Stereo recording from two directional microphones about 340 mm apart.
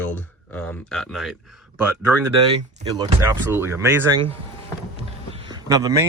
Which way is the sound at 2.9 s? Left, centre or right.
Centre.